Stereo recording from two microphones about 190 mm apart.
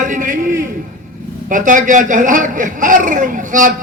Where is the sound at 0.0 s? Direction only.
40° right (ahead or behind).